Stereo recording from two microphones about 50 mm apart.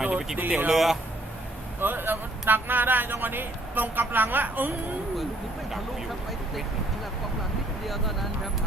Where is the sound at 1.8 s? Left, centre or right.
Right.